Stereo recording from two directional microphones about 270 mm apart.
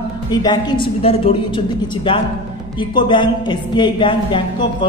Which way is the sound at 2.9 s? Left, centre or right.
Centre.